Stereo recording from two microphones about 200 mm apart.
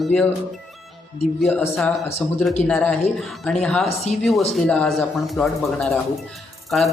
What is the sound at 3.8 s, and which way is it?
Speech, 35° left (ahead or behind).